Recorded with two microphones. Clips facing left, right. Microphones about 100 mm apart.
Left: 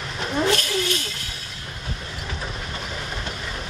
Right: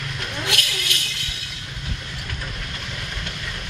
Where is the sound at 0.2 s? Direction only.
35° left (ahead or behind).